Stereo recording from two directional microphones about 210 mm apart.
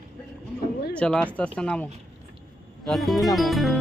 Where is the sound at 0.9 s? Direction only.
5° left (ahead or behind).